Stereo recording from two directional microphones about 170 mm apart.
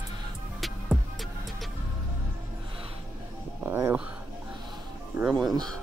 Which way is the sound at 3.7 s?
15° right (ahead or behind).